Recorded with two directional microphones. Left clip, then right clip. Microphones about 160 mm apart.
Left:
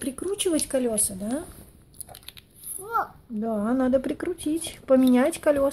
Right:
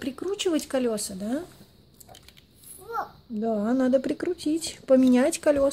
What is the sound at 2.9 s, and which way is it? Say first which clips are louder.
A child's voice: left 5 dB; 25° right (ahead or behind).